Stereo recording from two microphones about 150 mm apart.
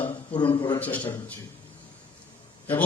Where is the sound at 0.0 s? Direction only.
35° left (ahead or behind).